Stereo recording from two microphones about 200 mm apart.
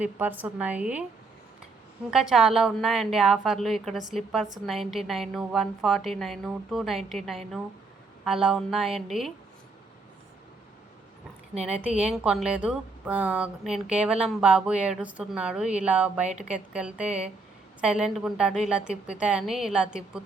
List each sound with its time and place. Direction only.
0.0 s a woman's voice: 10° right (ahead or behind)
2.0 s speech: centre (ahead or behind)
11.6 s speech: 5° right (ahead or behind)
11.9 s a woman's voice: 35° right (ahead or behind)
12.1 s speech: centre (ahead or behind)